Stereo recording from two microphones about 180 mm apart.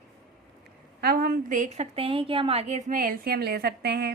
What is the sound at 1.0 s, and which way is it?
A woman's voice, 60° right (ahead or behind).